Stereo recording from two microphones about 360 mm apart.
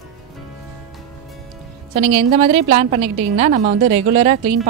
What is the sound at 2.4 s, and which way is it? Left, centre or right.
Speech, centre.